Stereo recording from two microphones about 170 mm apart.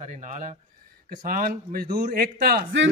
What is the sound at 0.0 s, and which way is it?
A man's voice, 45° right (ahead or behind).